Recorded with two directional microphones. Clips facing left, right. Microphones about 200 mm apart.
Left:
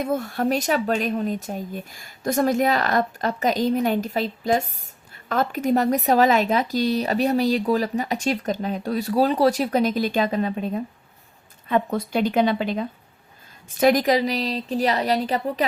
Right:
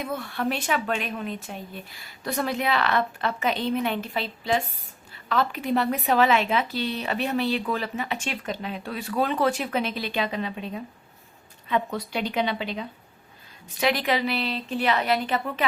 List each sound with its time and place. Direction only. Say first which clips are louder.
0.0 s speech: left 5 dB; 45° left (ahead or behind)